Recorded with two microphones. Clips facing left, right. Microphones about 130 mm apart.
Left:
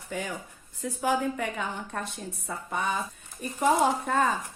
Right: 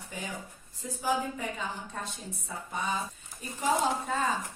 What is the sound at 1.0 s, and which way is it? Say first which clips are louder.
A woman's voice: left 4 dB; 65° left (ahead or behind).